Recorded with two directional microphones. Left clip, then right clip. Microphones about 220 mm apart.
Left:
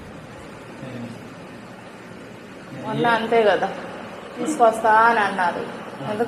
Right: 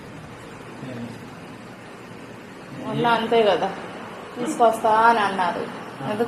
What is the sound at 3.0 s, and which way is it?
Speech, 15° right (ahead or behind).